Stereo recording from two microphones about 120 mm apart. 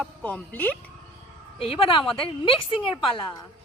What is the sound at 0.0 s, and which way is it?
Speech, 10° left (ahead or behind).